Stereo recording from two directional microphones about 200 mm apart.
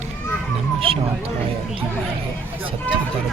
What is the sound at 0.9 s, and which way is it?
Speech, 25° right (ahead or behind).